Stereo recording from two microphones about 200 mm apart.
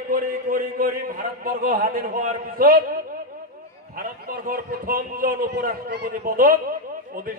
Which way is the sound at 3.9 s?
45° right (ahead or behind).